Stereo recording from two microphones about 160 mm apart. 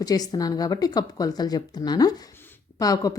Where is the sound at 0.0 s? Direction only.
25° left (ahead or behind).